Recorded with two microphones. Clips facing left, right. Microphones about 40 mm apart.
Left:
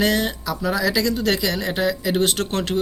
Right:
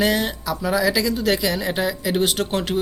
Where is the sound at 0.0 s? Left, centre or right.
Centre.